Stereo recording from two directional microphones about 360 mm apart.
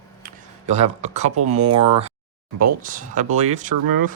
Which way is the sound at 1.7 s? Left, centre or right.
Centre.